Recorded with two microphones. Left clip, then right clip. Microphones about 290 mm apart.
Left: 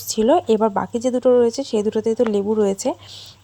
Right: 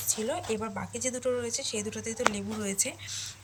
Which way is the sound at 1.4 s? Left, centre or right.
Centre.